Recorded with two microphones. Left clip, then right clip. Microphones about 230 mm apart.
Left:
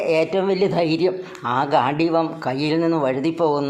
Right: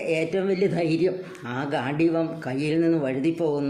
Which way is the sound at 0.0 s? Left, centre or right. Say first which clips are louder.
Left 6 dB; centre.